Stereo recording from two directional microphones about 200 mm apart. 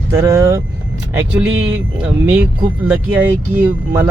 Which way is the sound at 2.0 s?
10° right (ahead or behind).